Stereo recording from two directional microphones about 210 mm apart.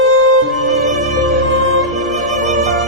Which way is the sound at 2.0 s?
Centre (ahead or behind).